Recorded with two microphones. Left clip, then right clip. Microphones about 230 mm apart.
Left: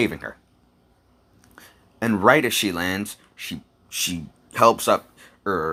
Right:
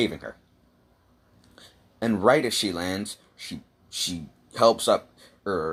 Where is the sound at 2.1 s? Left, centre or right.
Left.